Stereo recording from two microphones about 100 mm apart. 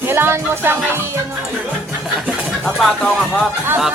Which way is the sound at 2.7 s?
5° left (ahead or behind).